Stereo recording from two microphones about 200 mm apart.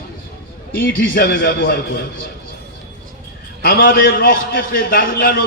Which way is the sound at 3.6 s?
45° left (ahead or behind).